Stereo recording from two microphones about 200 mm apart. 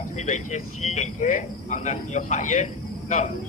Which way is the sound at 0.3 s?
35° left (ahead or behind).